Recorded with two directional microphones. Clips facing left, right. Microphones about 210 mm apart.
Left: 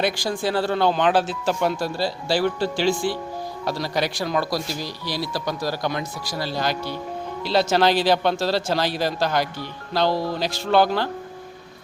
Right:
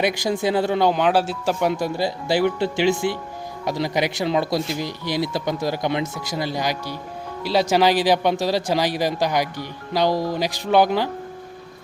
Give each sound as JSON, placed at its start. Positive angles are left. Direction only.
{"t": 0.0, "sound": "speech", "side_deg": -20}